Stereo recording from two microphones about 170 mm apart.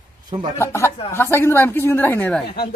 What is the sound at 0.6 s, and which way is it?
A woman's voice, 15° left (ahead or behind).